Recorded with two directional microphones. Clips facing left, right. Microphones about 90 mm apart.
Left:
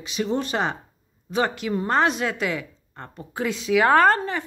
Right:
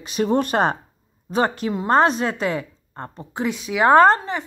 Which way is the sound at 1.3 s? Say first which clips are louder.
Right 3 dB; 40° right (ahead or behind).